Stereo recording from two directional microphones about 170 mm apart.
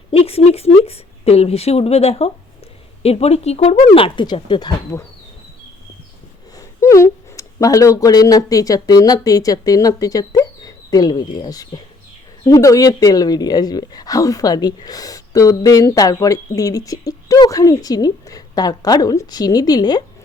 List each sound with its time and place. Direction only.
0.1 s a woman's voice: 35° left (ahead or behind)
6.6 s speech: 20° left (ahead or behind)